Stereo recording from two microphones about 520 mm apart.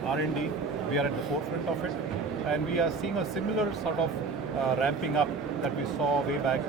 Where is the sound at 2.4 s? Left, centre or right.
Left.